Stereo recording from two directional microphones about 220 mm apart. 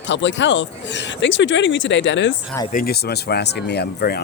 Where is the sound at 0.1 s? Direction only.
55° left (ahead or behind).